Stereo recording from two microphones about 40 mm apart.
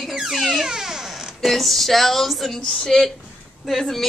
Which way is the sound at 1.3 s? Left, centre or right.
Centre.